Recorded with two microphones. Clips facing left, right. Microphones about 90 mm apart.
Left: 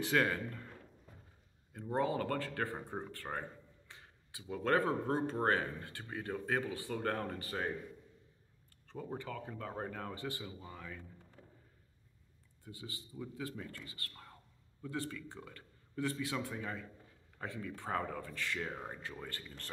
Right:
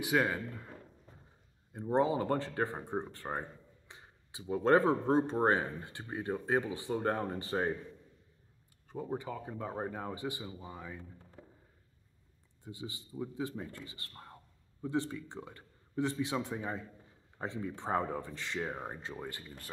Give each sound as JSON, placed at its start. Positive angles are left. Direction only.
{"t": 0.0, "sound": "speech", "side_deg": -10}
{"t": 1.7, "sound": "speech", "side_deg": -20}
{"t": 8.8, "sound": "speech", "side_deg": -15}
{"t": 12.6, "sound": "speech", "side_deg": -20}